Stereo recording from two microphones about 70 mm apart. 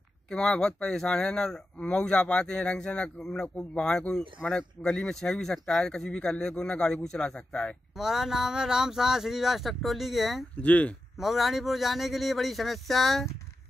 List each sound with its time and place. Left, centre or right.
0.3 s speech: centre
7.9 s speech: centre
10.6 s speech: left
11.1 s speech: centre